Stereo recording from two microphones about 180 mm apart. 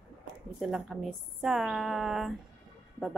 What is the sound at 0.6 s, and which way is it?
A woman's voice, centre (ahead or behind).